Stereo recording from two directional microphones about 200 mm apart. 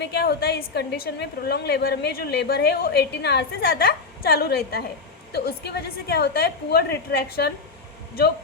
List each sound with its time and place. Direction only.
0.0 s a woman's voice: 55° left (ahead or behind)